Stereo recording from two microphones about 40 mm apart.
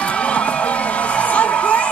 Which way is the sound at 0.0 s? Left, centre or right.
Left.